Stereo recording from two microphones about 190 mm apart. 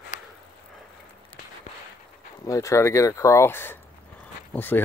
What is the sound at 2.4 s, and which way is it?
Speech, 15° left (ahead or behind).